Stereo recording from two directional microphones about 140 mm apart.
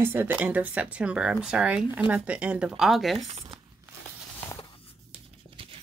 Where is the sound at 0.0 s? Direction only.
15° right (ahead or behind).